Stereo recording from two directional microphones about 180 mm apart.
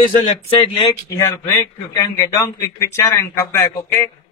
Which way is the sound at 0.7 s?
15° left (ahead or behind).